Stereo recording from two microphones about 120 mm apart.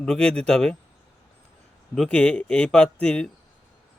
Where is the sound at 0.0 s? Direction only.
5° left (ahead or behind).